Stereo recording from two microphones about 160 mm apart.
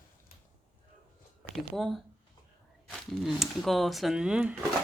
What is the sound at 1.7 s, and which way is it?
Speech, centre (ahead or behind).